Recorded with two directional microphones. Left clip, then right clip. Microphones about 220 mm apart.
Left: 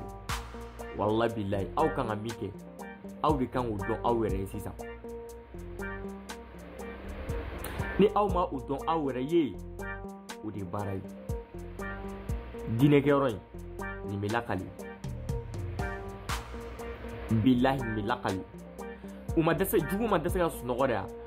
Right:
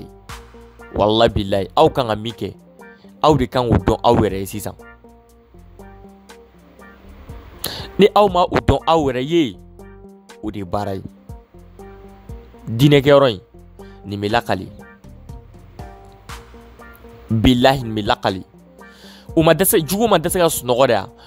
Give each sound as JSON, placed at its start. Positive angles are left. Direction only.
{"t": 0.3, "sound": "music", "side_deg": 0}
{"t": 0.9, "sound": "speech", "side_deg": -55}
{"t": 3.2, "sound": "speech", "side_deg": -50}
{"t": 8.0, "sound": "speech", "side_deg": -55}
{"t": 12.7, "sound": "speech", "side_deg": -55}
{"t": 15.8, "sound": "music", "side_deg": 0}
{"t": 17.5, "sound": "speech", "side_deg": -55}
{"t": 19.3, "sound": "speech", "side_deg": -55}